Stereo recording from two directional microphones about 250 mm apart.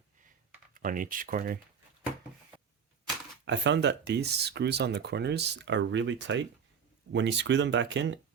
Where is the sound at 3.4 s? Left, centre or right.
Right.